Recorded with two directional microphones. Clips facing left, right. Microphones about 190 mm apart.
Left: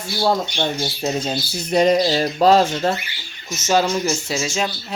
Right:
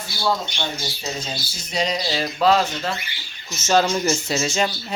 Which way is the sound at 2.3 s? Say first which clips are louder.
Left 3 dB; 40° left (ahead or behind).